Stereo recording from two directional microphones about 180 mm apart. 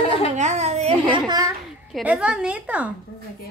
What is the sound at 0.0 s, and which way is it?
Babbling, 35° left (ahead or behind).